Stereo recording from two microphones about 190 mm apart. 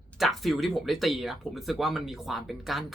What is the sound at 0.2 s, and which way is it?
Speech, centre (ahead or behind).